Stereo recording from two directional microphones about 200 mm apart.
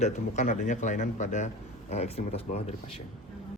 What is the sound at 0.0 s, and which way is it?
Speech, 35° left (ahead or behind).